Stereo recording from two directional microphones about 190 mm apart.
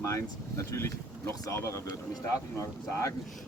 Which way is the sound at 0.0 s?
15° left (ahead or behind).